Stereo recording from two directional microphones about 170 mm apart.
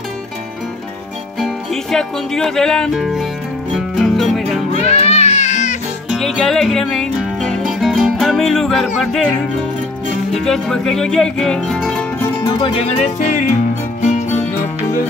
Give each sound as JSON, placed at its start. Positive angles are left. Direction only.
{"t": 1.4, "sound": "music", "side_deg": 5}
{"t": 4.7, "sound": "music", "side_deg": 40}
{"t": 6.0, "sound": "music", "side_deg": 0}
{"t": 10.3, "sound": "music", "side_deg": 0}
{"t": 12.4, "sound": "music", "side_deg": 30}